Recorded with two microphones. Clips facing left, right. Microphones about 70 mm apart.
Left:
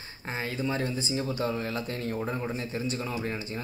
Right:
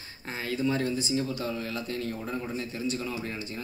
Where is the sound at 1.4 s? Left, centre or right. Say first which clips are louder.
Left 3 dB; left.